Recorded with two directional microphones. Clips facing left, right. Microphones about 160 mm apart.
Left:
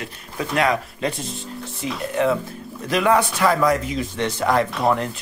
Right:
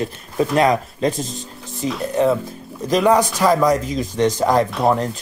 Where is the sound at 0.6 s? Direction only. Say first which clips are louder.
Right 2 dB; 40° right (ahead or behind).